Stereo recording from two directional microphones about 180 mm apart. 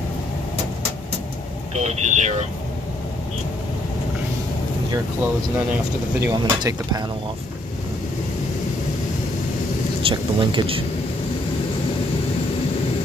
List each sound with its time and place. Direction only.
1.8 s speech: 40° right (ahead or behind)
6.2 s speech: 25° right (ahead or behind)
10.0 s speech: 30° right (ahead or behind)